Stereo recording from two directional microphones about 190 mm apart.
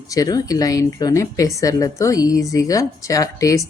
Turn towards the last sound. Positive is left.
turn(degrees=15)  # may be behind; listen again after turning